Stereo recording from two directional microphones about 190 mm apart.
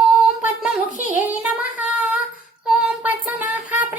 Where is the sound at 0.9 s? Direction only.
40° left (ahead or behind).